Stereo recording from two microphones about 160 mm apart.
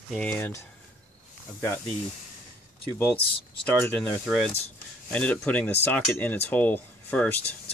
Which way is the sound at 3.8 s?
15° left (ahead or behind).